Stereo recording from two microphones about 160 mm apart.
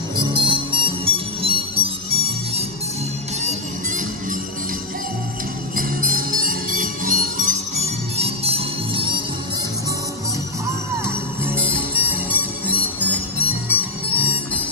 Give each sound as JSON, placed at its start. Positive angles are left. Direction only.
{"t": 0.2, "sound": "music", "side_deg": -30}
{"t": 5.8, "sound": "music", "side_deg": -60}
{"t": 11.1, "sound": "music", "side_deg": -15}